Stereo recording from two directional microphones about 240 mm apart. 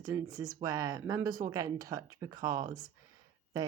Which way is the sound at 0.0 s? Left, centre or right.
Centre.